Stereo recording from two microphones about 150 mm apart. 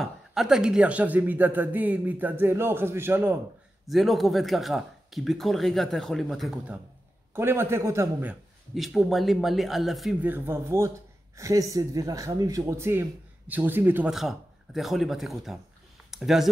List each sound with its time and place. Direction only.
0.0 s a man's voice: centre (ahead or behind)
3.8 s speech: centre (ahead or behind)
7.3 s a man's voice: 15° right (ahead or behind)
8.7 s speech: centre (ahead or behind)
10.2 s a man's voice: 15° right (ahead or behind)
14.1 s speech: centre (ahead or behind)